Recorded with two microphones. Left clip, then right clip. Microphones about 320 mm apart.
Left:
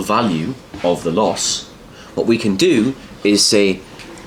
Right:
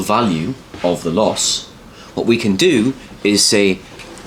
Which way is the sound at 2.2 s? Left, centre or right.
Right.